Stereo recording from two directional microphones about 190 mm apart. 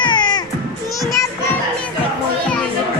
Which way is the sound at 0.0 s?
20° left (ahead or behind).